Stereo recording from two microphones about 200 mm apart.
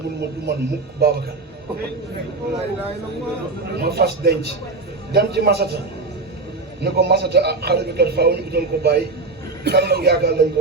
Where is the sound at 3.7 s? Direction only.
50° right (ahead or behind).